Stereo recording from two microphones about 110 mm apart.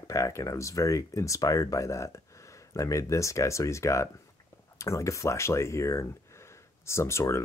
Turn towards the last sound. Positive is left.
turn(degrees=25)  # may be behind; listen again after turning